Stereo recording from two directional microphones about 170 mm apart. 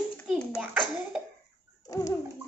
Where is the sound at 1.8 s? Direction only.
20° left (ahead or behind).